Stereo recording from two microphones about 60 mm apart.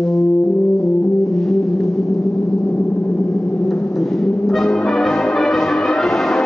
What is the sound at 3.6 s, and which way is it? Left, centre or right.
Brass instrument, centre.